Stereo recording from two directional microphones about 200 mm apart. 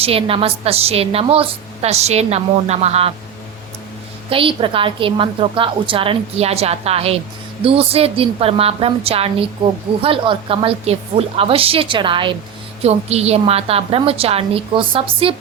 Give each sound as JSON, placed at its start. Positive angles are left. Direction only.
{"t": 0.0, "sound": "a woman's voice", "side_deg": -30}
{"t": 4.3, "sound": "a woman's voice", "side_deg": -25}